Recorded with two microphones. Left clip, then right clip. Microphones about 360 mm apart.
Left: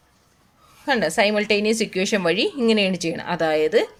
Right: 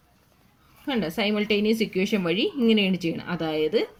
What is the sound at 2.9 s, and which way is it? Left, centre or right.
Speech, left.